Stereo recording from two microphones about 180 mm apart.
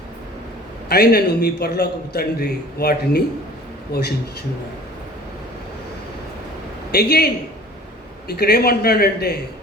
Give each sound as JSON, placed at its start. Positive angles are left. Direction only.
{"t": 0.9, "sound": "a man's voice", "side_deg": 60}
{"t": 6.9, "sound": "a man's voice", "side_deg": 60}
{"t": 8.3, "sound": "a man's voice", "side_deg": 60}